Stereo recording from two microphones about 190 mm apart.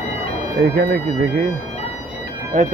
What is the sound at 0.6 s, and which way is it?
Speech, 55° right (ahead or behind).